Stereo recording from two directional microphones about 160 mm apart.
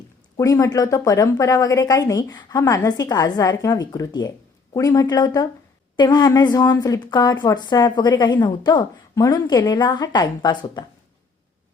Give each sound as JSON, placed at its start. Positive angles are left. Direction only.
{"t": 0.3, "sound": "a woman's voice", "side_deg": 20}